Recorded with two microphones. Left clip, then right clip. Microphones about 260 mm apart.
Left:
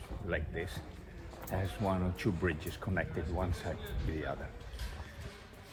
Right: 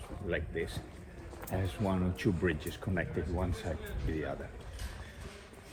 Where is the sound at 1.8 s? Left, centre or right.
Left.